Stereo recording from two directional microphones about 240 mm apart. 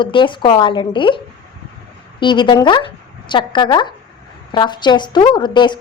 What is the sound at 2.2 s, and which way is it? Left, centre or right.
A woman's voice, centre.